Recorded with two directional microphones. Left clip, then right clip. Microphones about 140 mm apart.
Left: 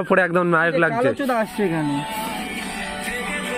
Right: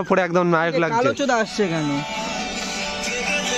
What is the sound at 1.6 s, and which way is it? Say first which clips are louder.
Speech: even; 25° right (ahead or behind).